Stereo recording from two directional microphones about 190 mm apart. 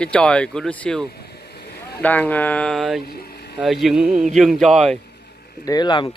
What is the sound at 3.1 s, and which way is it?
Vehicle, 55° left (ahead or behind).